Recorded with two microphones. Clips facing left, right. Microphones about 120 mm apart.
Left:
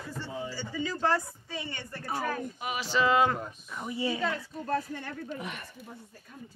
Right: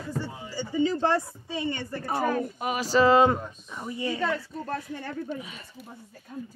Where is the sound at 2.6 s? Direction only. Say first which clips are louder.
Right 6 dB; 45° right (ahead or behind).